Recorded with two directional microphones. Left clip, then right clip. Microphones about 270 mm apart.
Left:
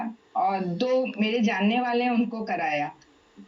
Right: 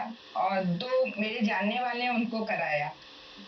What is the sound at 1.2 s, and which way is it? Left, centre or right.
A woman's voice, left.